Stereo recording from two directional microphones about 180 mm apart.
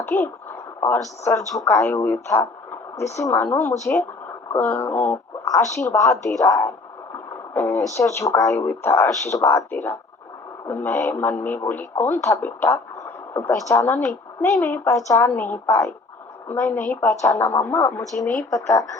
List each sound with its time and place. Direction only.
0.0 s speech: 10° left (ahead or behind)
6.4 s a sound: 15° left (ahead or behind)
7.9 s speech: 15° left (ahead or behind)